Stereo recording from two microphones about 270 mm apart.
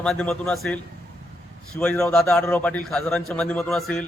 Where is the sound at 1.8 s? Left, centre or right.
Centre.